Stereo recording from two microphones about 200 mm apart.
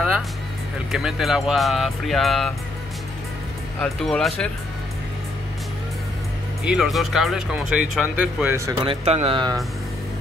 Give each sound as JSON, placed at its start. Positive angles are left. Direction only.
{"t": 0.9, "sound": "speech", "side_deg": 0}
{"t": 3.8, "sound": "speech", "side_deg": 0}
{"t": 6.6, "sound": "speech", "side_deg": -5}
{"t": 8.8, "sound": "speech", "side_deg": -30}